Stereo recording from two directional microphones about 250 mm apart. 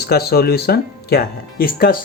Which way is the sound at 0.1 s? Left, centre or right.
Left.